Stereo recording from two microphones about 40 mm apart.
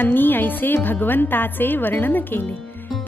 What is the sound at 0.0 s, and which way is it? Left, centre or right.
Speech, left.